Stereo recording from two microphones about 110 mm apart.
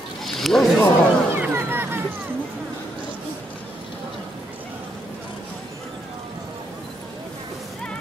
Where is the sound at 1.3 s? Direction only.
20° right (ahead or behind).